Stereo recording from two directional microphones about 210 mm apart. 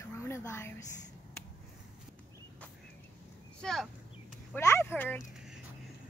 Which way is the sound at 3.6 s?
Centre (ahead or behind).